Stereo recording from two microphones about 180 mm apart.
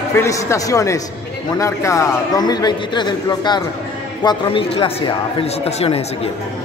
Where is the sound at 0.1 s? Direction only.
15° left (ahead or behind); by 5.9 s 30° left (ahead or behind).